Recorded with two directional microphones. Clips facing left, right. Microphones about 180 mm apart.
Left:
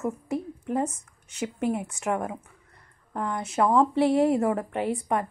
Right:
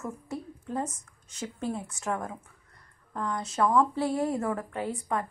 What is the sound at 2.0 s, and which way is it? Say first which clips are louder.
Speech: left 3 dB; 15° left (ahead or behind).